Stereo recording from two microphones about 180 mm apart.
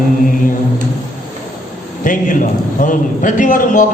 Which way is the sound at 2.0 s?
45° left (ahead or behind).